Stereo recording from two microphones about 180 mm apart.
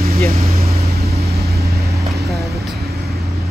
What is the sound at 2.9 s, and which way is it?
Vehicle, 60° right (ahead or behind).